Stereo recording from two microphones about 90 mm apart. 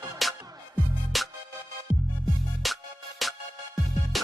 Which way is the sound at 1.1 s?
Centre (ahead or behind).